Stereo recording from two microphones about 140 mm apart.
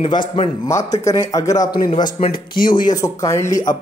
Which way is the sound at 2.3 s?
85° left.